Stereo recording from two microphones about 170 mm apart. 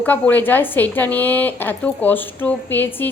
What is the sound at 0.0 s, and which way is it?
A woman's voice, 10° left (ahead or behind).